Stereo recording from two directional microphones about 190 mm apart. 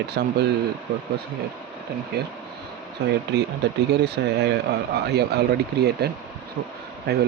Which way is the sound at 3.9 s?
65° right (ahead or behind).